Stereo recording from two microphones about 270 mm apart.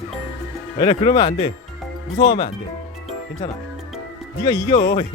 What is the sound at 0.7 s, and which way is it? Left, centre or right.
Speech, centre.